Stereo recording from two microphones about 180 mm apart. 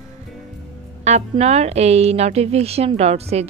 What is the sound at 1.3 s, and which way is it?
A woman's voice, 35° right (ahead or behind).